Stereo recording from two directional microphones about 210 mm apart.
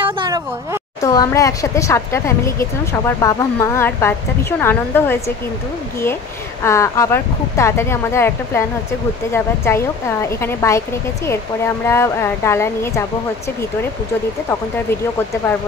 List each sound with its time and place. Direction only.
0.0 s a sound: 25° right (ahead or behind)
1.0 s speech: 15° left (ahead or behind)
6.6 s speech: 15° left (ahead or behind)
14.5 s speech: 10° left (ahead or behind)